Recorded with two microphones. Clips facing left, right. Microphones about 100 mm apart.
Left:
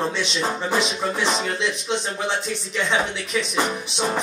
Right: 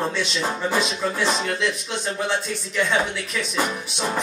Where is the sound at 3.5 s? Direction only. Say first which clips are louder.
Left 1 dB; 20° left (ahead or behind).